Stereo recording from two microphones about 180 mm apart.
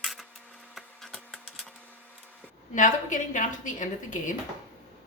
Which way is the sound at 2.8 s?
45° left (ahead or behind).